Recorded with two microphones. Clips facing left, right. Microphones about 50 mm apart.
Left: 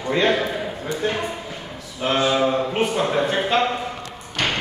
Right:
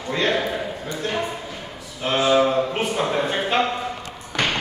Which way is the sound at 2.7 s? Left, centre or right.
Centre.